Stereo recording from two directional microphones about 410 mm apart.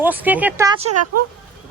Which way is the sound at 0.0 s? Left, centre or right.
Centre.